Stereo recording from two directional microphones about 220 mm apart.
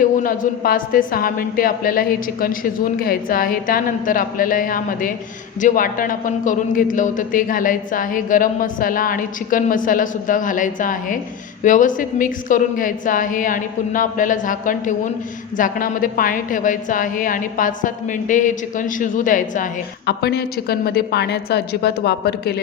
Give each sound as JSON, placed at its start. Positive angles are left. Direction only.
{"t": 0.0, "sound": "a man's voice", "side_deg": 40}